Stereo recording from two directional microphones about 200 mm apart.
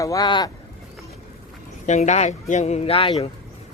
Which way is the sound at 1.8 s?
35° left (ahead or behind).